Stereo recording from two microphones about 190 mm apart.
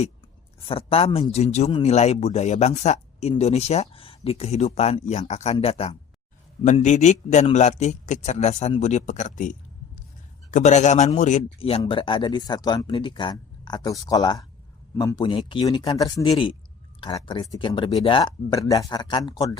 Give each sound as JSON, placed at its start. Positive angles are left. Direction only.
{"t": 0.7, "sound": "speech", "side_deg": 30}
{"t": 11.8, "sound": "speech", "side_deg": 25}